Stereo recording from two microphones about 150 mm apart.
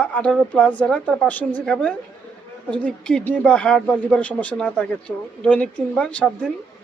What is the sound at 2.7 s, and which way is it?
Speech, 5° left (ahead or behind).